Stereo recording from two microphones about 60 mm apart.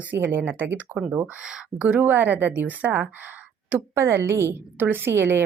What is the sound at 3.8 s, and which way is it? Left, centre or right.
Speech, right.